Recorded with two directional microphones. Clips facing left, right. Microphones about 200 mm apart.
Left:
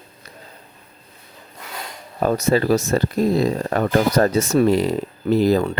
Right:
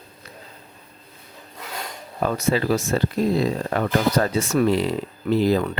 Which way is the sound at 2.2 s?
40° left (ahead or behind).